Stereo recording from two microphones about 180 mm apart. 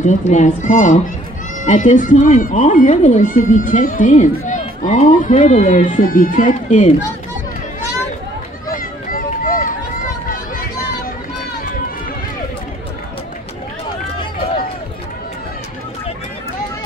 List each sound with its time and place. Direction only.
0.0 s speech: 40° left (ahead or behind)
8.6 s run: 50° left (ahead or behind)